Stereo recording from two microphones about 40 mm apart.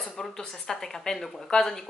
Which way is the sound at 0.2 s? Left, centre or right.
Centre.